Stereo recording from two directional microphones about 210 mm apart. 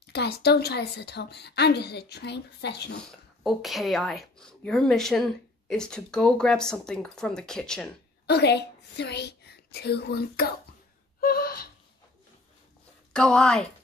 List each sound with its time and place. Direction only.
0.0 s a woman's voice: 50° left (ahead or behind)
3.1 s a woman's voice: centre (ahead or behind)
8.3 s a woman's voice: 50° left (ahead or behind)
11.1 s gasp: 45° left (ahead or behind)
13.1 s a woman's voice: 5° left (ahead or behind)